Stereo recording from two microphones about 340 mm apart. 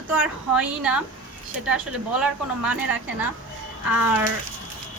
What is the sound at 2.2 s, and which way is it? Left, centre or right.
Speech, centre.